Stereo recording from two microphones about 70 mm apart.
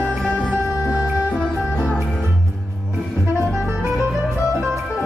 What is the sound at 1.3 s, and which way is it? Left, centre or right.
Music, centre.